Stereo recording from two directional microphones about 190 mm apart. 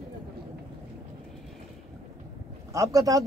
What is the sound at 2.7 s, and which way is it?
Speech, 20° right (ahead or behind).